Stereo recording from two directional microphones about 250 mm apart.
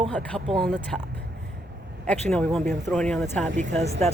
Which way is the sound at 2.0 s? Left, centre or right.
Centre.